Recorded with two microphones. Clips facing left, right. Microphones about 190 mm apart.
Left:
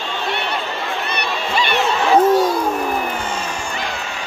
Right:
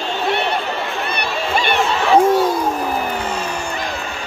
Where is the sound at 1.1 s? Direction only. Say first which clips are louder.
Right 1 dB; 50° right (ahead or behind).